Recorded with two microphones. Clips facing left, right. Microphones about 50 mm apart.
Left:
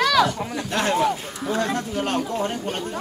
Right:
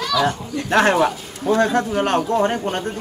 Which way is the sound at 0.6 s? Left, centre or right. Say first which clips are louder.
Right 6 dB; right.